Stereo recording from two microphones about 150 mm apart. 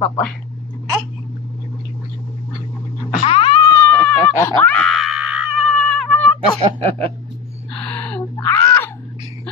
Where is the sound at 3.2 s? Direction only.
35° left (ahead or behind).